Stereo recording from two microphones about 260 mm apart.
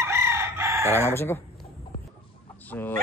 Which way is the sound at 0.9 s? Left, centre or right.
Centre.